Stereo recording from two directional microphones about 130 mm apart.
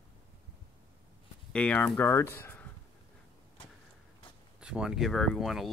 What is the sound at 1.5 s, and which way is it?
Speech, 10° left (ahead or behind).